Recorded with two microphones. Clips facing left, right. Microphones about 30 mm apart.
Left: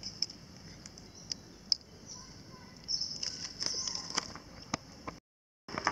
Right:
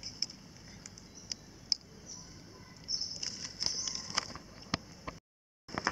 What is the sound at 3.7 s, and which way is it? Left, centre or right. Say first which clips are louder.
Run: left 1 dB; centre.